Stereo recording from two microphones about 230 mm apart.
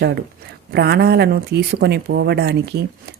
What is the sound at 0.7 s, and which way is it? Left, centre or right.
Speech, right.